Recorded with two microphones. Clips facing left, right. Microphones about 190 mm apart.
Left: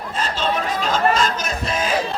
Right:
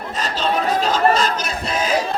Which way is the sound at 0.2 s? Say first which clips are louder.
Right 1 dB; 35° right (ahead or behind).